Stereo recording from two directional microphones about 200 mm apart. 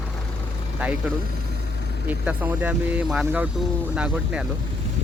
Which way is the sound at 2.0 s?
5° right (ahead or behind).